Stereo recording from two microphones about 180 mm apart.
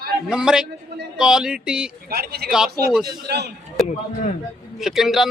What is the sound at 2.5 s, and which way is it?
Speech, 5° right (ahead or behind).